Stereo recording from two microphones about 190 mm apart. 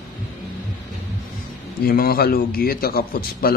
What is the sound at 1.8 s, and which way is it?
A man's voice, 50° left (ahead or behind).